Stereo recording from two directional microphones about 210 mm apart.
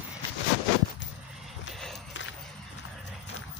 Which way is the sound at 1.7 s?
Centre (ahead or behind).